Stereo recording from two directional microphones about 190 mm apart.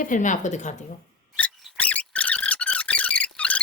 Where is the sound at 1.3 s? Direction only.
5° left (ahead or behind).